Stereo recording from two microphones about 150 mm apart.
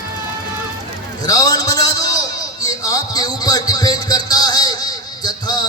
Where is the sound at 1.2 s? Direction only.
25° left (ahead or behind).